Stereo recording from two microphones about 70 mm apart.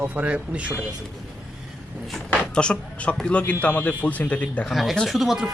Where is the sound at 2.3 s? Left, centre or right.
Centre.